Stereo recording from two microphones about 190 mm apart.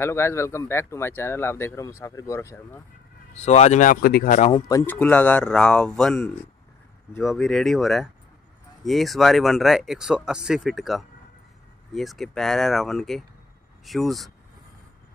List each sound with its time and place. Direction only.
0.0 s speech: 15° left (ahead or behind)
3.3 s speech: 35° left (ahead or behind)
4.4 s speech: 30° left (ahead or behind)
4.6 s speech: 15° left (ahead or behind)